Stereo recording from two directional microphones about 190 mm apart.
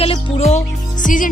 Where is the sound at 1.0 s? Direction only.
45° left (ahead or behind).